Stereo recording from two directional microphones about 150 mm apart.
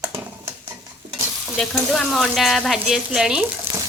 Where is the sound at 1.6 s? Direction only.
5° left (ahead or behind).